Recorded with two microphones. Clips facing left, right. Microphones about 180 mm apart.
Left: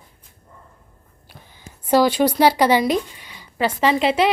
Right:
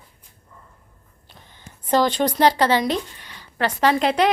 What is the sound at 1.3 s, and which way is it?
Speech, 10° left (ahead or behind).